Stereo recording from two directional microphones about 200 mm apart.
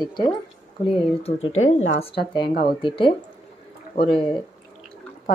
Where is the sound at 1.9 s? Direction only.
30° left (ahead or behind).